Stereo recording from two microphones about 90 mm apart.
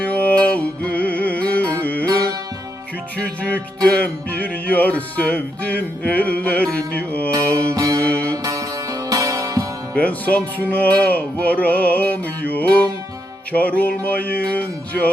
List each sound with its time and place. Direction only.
0.0 s music: 15° left (ahead or behind)
3.2 s music: 15° left (ahead or behind)
7.7 s music: 35° right (ahead or behind)
8.0 s music: 15° left (ahead or behind)
8.4 s music: 40° right (ahead or behind)
9.9 s music: 15° left (ahead or behind)